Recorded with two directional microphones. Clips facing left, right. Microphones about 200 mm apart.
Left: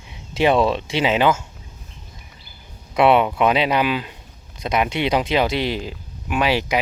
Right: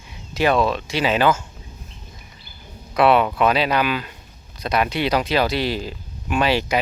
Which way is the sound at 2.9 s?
20° left (ahead or behind).